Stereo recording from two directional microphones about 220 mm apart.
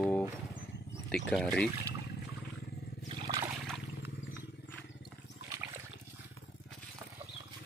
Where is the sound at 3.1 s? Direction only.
15° right (ahead or behind).